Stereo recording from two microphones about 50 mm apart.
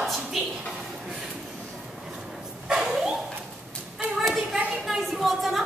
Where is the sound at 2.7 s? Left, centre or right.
Centre.